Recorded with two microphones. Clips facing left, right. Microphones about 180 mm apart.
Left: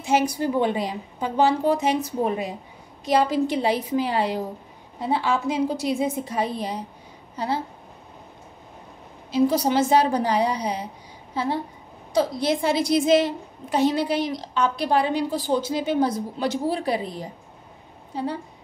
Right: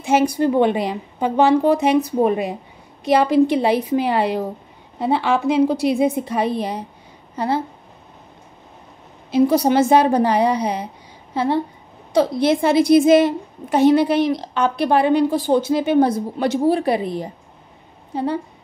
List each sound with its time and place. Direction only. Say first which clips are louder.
0.0 s a woman's voice: right 5 dB; 55° right (ahead or behind)
9.3 s a woman's voice: right 5 dB; 60° right (ahead or behind)